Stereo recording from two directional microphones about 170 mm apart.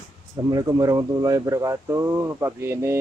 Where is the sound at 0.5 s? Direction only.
20° right (ahead or behind).